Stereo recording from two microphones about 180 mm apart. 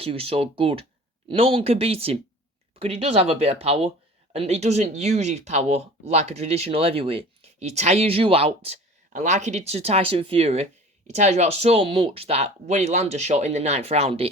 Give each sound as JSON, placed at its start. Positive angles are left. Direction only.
{"t": 0.0, "sound": "speech", "side_deg": -30}